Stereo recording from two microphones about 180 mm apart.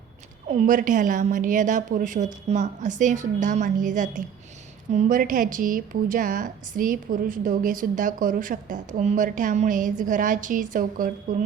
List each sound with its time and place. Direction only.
0.7 s a woman's voice: 45° right (ahead or behind)